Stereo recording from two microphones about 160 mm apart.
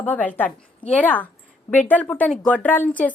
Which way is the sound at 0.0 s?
10° left (ahead or behind).